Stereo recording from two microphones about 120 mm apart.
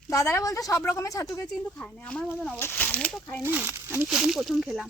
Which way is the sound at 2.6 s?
20° left (ahead or behind).